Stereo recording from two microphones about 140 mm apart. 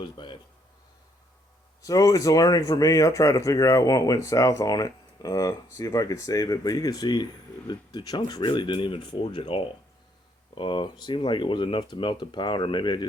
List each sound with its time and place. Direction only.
0.0 s speech: 35° left (ahead or behind)
1.8 s speech: 25° left (ahead or behind)